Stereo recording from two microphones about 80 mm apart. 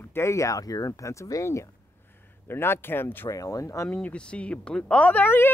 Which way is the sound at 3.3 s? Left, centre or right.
Left.